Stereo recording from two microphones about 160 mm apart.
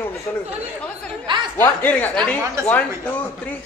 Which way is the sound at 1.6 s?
10° left (ahead or behind).